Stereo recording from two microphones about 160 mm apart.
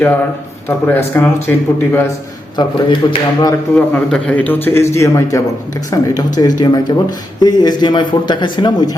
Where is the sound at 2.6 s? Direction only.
30° left (ahead or behind).